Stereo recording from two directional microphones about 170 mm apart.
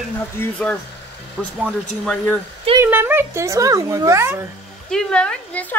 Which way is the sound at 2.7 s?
10° right (ahead or behind).